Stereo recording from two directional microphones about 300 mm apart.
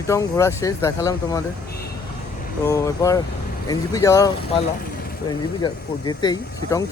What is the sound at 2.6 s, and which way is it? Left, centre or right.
Speech, centre.